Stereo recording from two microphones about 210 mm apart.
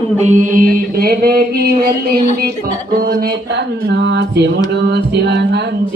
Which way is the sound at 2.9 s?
45° right (ahead or behind).